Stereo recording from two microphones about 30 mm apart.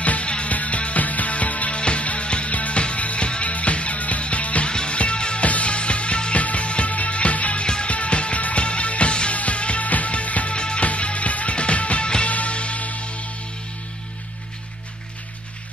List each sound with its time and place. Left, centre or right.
0.0 s music: left
1.8 s music: left
2.5 s music: left
4.6 s music: left
5.4 s music: left
7.6 s music: left
7.9 s music: left
8.4 s music: left
8.6 s music: left
9.8 s music: left
10.5 s music: left
10.9 s music: left
12.5 s music: left